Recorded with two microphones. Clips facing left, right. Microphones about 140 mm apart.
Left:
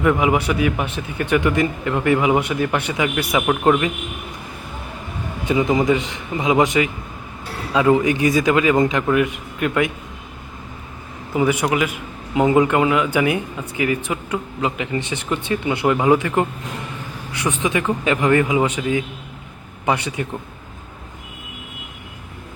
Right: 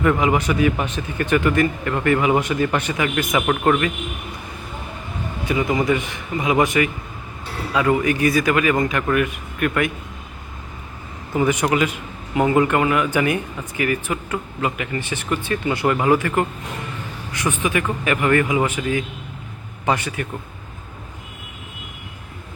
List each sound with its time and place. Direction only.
0.0 s speech: 10° left (ahead or behind)
5.5 s a man's voice: 20° left (ahead or behind)
11.3 s speech: 10° left (ahead or behind)
17.6 s a man's voice: 15° left (ahead or behind)